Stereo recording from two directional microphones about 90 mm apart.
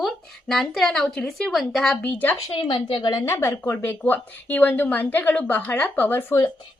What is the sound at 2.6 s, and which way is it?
Speech, 70° left (ahead or behind).